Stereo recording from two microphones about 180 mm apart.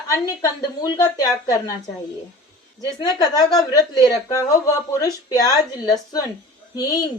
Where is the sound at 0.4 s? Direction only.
20° left (ahead or behind).